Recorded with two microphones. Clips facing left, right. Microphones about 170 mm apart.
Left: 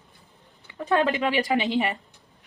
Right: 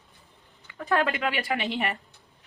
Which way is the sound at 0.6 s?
20° left (ahead or behind).